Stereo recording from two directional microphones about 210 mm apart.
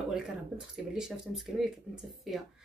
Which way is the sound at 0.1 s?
5° right (ahead or behind).